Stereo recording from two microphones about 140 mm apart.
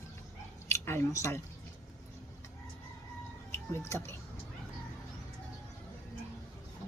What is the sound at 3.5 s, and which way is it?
Speech, 20° left (ahead or behind).